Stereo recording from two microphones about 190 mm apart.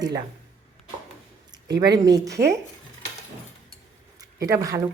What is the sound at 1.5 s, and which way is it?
Speech, 20° right (ahead or behind).